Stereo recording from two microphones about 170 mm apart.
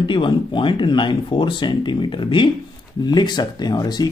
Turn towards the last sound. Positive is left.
turn(degrees=25)  # may be behind; listen again after turning